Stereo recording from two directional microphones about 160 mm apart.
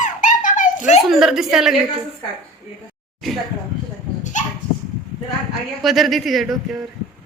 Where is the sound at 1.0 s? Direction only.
Centre (ahead or behind).